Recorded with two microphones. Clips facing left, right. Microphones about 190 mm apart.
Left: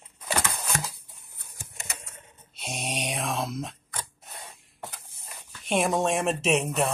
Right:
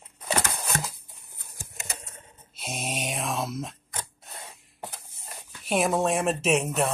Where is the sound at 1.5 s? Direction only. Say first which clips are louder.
Right 2 dB; 35° right (ahead or behind).